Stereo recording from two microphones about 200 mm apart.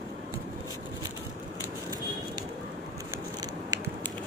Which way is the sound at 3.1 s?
20° right (ahead or behind).